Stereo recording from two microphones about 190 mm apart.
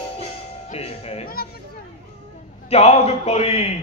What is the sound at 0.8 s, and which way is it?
Music, 30° left (ahead or behind).